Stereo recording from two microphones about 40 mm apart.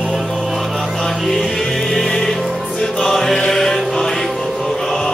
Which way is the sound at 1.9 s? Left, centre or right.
Centre.